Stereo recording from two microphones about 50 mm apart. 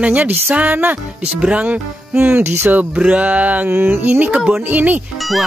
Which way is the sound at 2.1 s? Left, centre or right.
Right.